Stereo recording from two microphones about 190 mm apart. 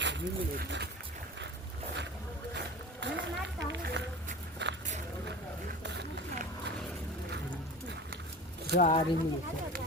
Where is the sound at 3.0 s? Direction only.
70° right (ahead or behind).